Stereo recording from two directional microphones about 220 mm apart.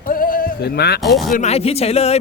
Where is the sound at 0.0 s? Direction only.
40° left (ahead or behind).